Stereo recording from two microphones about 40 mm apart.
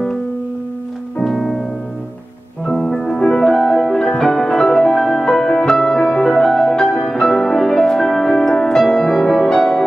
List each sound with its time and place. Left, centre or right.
1.2 s music: centre
3.2 s music: centre